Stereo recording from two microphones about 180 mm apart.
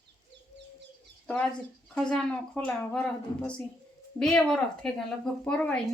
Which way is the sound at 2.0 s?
5° left (ahead or behind).